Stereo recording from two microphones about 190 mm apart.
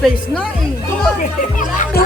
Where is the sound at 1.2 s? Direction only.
45° left (ahead or behind).